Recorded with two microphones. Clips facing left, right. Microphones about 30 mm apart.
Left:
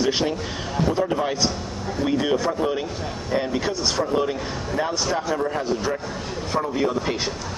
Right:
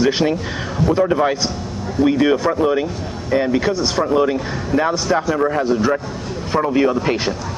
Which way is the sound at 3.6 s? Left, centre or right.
Centre.